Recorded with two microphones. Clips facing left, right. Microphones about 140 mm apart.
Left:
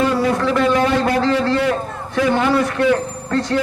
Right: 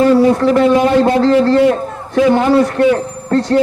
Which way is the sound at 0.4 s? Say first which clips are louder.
Right 6 dB; 35° right (ahead or behind).